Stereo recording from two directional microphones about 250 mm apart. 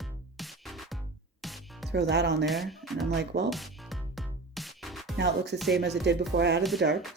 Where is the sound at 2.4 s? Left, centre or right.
Centre.